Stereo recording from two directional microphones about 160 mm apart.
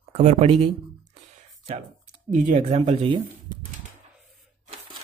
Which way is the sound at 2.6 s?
40° right (ahead or behind).